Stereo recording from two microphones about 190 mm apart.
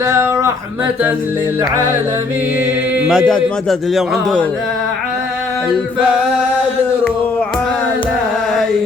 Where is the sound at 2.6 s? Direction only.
5° right (ahead or behind).